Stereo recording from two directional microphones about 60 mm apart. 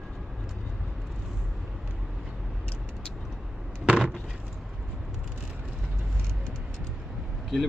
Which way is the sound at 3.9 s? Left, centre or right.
Centre.